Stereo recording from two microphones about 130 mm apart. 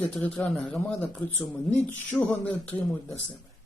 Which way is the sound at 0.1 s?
5° left (ahead or behind).